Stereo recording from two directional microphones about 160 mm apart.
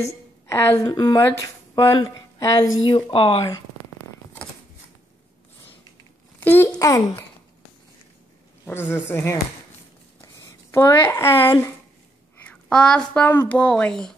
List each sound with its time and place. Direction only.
0.0 s a woman's voice: 15° left (ahead or behind); by 3.4 s 35° left (ahead or behind)
6.4 s speech: 10° left (ahead or behind)
8.6 s speech: 15° left (ahead or behind)
12.6 s speech: 5° left (ahead or behind)